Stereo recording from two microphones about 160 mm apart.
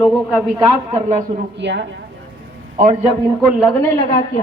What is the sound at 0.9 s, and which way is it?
Speech, 45° right (ahead or behind).